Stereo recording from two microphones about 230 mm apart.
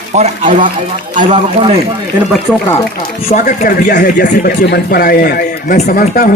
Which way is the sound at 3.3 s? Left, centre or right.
Left.